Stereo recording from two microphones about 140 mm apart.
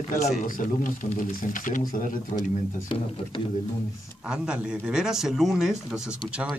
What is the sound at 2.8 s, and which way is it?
Speech, 40° left (ahead or behind).